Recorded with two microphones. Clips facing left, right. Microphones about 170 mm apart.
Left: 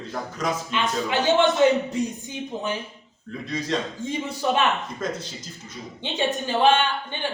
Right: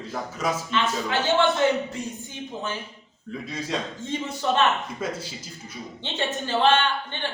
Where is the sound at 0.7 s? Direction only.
15° left (ahead or behind).